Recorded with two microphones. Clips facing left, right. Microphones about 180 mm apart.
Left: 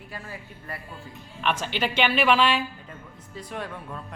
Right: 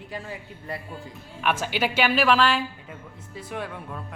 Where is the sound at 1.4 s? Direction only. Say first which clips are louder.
Right 2 dB; 10° right (ahead or behind).